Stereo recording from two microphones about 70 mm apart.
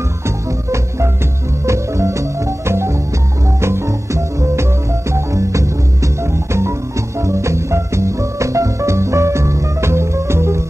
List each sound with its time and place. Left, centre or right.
0.7 s music: right